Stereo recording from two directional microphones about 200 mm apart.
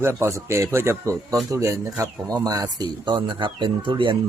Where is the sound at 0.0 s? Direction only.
15° right (ahead or behind).